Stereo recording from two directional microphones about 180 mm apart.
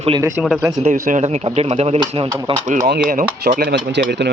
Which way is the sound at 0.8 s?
45° right (ahead or behind).